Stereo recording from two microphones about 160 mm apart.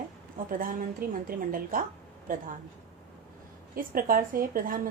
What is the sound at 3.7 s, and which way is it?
A woman's voice, 60° right (ahead or behind).